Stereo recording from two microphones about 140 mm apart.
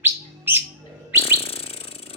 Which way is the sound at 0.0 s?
15° right (ahead or behind).